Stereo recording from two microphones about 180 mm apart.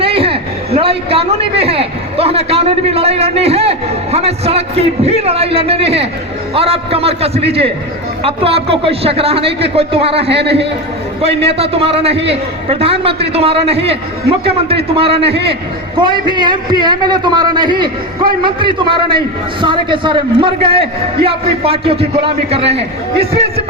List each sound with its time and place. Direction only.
0.0 s a sound: 30° right (ahead or behind)
6.5 s speech: 35° right (ahead or behind)
10.2 s a man's voice: 70° right (ahead or behind)
11.4 s a man's voice: 35° right (ahead or behind)